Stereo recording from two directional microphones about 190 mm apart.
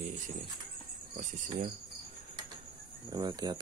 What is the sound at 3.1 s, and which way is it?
Speech, 20° right (ahead or behind).